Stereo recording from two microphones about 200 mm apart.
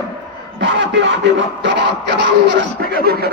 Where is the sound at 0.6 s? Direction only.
65° right (ahead or behind).